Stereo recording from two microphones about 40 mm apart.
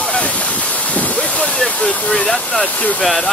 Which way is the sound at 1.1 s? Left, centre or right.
Left.